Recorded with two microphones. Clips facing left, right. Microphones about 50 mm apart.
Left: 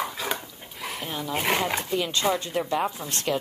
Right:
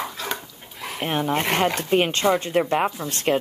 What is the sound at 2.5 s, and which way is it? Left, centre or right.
Speech, right.